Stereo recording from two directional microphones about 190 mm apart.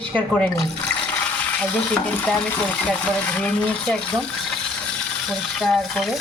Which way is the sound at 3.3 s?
5° left (ahead or behind).